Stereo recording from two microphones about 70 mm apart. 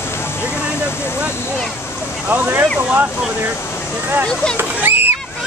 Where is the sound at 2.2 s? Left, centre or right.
Right.